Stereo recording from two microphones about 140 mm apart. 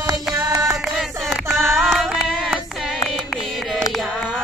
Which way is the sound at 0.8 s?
Centre (ahead or behind).